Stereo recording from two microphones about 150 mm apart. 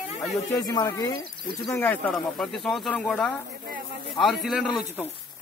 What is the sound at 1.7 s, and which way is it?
Speech, 10° left (ahead or behind).